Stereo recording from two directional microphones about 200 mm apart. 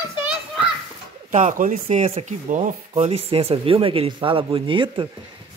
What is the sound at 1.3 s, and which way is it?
Speech, 40° right (ahead or behind).